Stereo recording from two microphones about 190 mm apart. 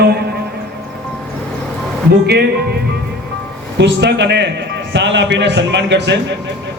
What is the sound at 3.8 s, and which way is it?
A man's voice, 65° right (ahead or behind).